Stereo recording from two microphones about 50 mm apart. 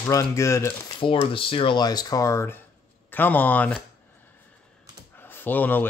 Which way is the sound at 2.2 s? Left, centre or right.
Left.